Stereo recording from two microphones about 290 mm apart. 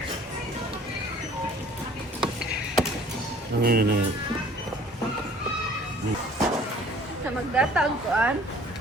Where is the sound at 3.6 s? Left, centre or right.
Right.